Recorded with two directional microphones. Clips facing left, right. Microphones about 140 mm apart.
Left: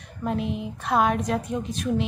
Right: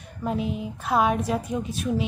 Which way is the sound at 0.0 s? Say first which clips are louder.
Even; centre (ahead or behind).